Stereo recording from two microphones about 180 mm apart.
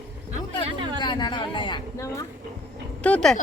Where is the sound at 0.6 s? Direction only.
25° right (ahead or behind).